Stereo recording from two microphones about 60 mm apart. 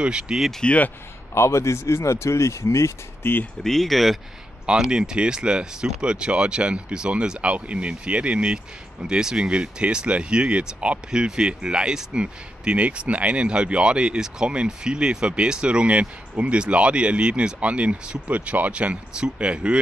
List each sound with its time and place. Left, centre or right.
0.0 s speech: centre
0.7 s speech: left
1.3 s speech: left
3.6 s speech: centre
4.6 s speech: centre